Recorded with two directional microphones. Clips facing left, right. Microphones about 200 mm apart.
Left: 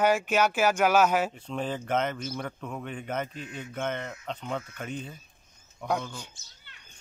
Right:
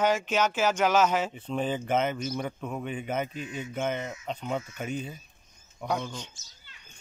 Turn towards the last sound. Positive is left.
turn(degrees=60)  # may be behind; listen again after turning